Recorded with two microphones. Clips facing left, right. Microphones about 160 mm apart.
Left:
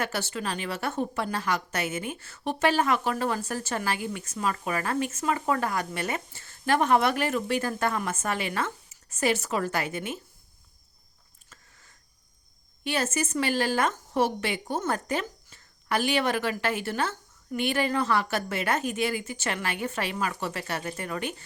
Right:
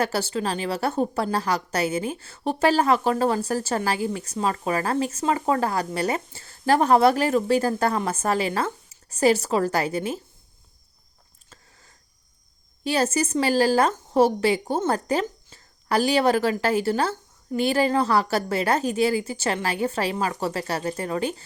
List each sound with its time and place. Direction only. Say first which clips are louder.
0.0 s a woman's voice: right 6 dB; 35° right (ahead or behind)
11.4 s a sound: right 3 dB; 30° right (ahead or behind)
12.8 s a woman's voice: right 6 dB; 35° right (ahead or behind)